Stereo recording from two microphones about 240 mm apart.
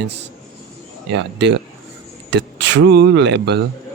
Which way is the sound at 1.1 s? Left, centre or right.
Right.